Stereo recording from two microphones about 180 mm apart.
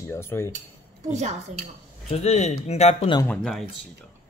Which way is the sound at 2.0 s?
35° left (ahead or behind).